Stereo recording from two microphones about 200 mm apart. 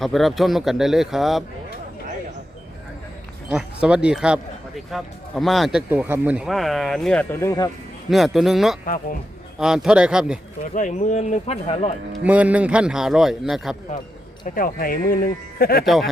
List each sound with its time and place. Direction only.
0.0 s speech: centre (ahead or behind)
3.5 s speech: 5° right (ahead or behind); by 7.7 s 15° left (ahead or behind)
8.1 s speech: centre (ahead or behind)
10.8 s speech: 40° left (ahead or behind)
12.2 s speech: 5° right (ahead or behind)
14.4 s speech: 45° left (ahead or behind)